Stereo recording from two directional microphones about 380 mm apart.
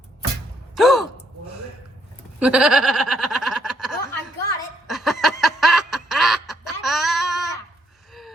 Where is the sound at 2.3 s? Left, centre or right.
Centre.